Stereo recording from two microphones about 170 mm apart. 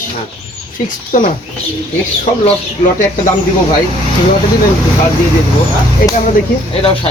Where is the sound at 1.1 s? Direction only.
50° left (ahead or behind).